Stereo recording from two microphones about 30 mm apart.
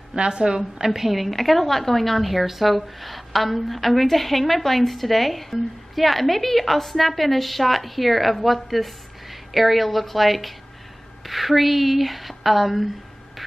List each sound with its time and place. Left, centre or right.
0.1 s a woman's voice: right
0.6 s a woman's voice: centre
1.1 s a woman's voice: centre
13.4 s hum: centre